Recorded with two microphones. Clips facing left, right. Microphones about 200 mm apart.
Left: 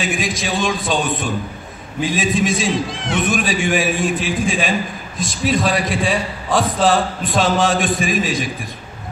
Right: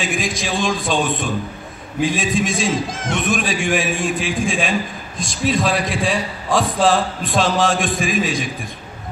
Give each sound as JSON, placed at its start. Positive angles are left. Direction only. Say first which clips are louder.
{"t": 0.0, "sound": "a man's voice", "louder": "left 1 dB", "side_deg": 0}
{"t": 2.9, "sound": "speech", "louder": "even", "side_deg": -45}
{"t": 3.2, "sound": "a man's voice", "louder": "left 2 dB", "side_deg": 0}